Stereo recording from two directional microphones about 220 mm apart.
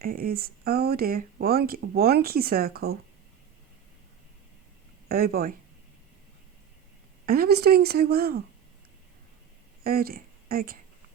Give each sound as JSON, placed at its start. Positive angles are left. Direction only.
{"t": 0.0, "sound": "speech", "side_deg": -40}
{"t": 5.0, "sound": "speech", "side_deg": -45}
{"t": 7.3, "sound": "speech", "side_deg": -45}
{"t": 9.8, "sound": "speech", "side_deg": -45}